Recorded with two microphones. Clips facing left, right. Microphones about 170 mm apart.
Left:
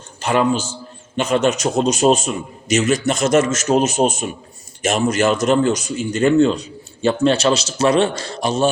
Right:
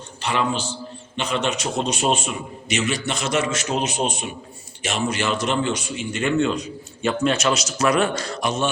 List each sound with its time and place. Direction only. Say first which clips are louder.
0.2 s a man's voice: left 6 dB; 45° left (ahead or behind)